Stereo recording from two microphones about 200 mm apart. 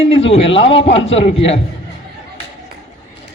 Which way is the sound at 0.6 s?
25° left (ahead or behind).